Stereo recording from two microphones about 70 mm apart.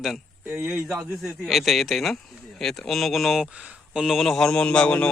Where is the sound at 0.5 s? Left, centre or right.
Right.